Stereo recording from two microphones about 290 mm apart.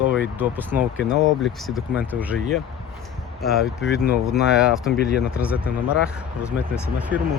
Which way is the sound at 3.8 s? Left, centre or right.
Left.